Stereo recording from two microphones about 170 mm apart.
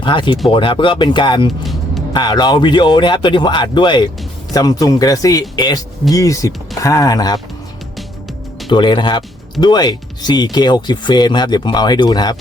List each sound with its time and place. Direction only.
0.0 s speech: 30° left (ahead or behind)
8.7 s speech: 25° left (ahead or behind)